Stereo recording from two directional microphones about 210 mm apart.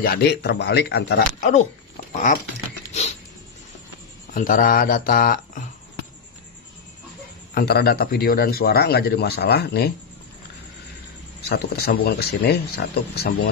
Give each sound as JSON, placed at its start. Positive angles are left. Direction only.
{"t": 0.0, "sound": "a man's voice", "side_deg": 50}
{"t": 2.9, "sound": "a sound", "side_deg": 30}
{"t": 4.3, "sound": "a man's voice", "side_deg": 40}
{"t": 7.5, "sound": "a man's voice", "side_deg": 50}
{"t": 11.4, "sound": "a man's voice", "side_deg": 50}